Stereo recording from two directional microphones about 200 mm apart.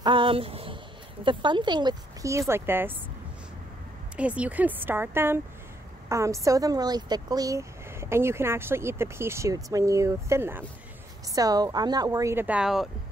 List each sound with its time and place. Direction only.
0.0 s a sound: 25° right (ahead or behind)
1.2 s speech: 25° right (ahead or behind)
4.2 s speech: 5° right (ahead or behind)